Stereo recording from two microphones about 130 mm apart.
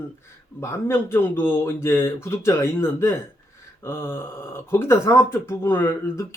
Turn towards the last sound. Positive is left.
turn(degrees=20)  # may be behind; listen again after turning